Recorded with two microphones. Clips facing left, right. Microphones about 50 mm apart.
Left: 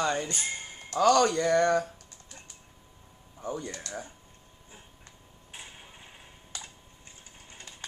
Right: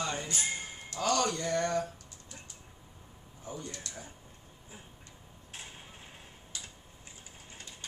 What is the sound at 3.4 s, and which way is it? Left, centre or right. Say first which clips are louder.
Speech: left 7 dB; left.